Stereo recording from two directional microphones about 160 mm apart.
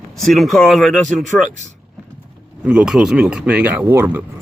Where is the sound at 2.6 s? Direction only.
5° right (ahead or behind).